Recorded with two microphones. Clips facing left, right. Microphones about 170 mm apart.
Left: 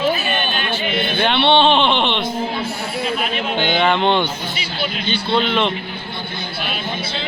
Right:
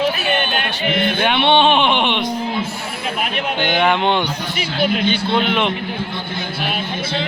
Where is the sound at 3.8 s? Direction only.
10° right (ahead or behind).